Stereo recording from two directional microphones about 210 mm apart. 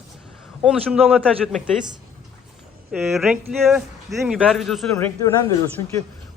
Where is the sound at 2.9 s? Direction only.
Centre (ahead or behind).